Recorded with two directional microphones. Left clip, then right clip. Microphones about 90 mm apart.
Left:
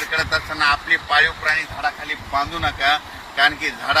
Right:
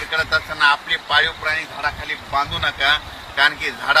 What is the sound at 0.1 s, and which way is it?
Speech, 35° right (ahead or behind).